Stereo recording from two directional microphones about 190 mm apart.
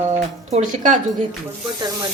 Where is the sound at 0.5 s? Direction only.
40° right (ahead or behind).